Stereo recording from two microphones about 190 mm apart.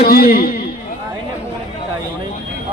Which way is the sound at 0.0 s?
50° left (ahead or behind).